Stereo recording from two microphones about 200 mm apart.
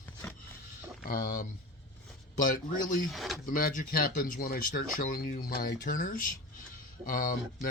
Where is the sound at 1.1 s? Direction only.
45° left (ahead or behind).